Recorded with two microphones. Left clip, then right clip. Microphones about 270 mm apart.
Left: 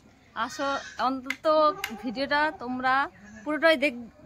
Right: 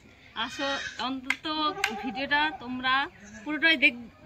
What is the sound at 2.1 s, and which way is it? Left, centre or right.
A woman's voice, centre.